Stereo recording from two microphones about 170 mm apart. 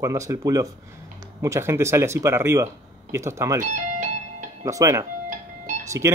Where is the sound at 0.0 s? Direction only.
20° right (ahead or behind).